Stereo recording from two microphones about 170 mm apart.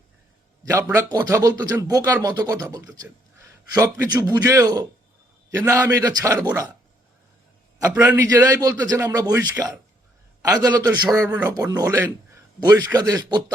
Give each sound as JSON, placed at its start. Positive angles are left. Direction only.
{"t": 0.6, "sound": "a man's voice", "side_deg": -15}
{"t": 7.9, "sound": "a man's voice", "side_deg": -10}